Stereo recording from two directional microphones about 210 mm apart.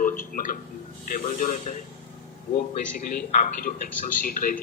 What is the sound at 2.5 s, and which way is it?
A man's voice, 40° left (ahead or behind).